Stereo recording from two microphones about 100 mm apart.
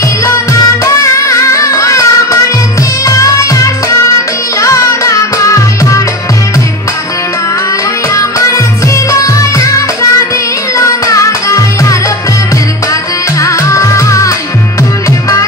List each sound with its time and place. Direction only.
0.2 s music: 30° left (ahead or behind)
3.1 s music: 35° left (ahead or behind)
8.1 s music: 30° left (ahead or behind)
13.4 s music: 30° left (ahead or behind)